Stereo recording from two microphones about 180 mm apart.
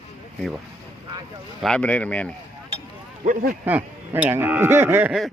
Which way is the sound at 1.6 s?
5° left (ahead or behind).